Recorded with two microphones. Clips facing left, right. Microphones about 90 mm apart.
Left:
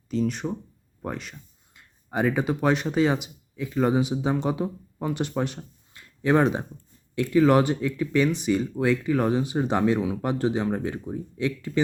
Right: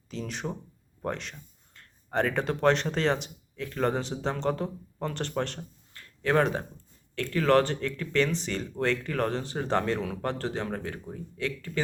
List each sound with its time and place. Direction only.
0.1 s speech: centre (ahead or behind)
5.9 s a sound: 15° left (ahead or behind)
7.2 s speech: 15° left (ahead or behind)